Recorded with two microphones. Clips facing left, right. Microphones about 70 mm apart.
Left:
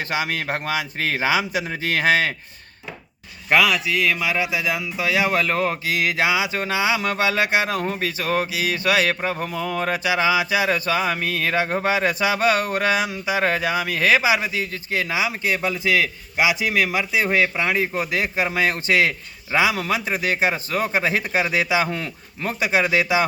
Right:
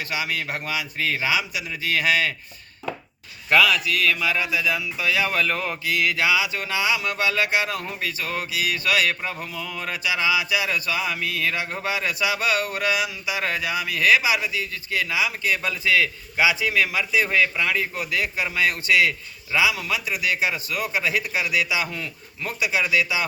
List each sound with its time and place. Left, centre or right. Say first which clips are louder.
0.0 s speech: left 3 dB; left
3.5 s speech: left 1 dB; left
17.2 s speech: left 1 dB; left
21.8 s speech: left 5 dB; left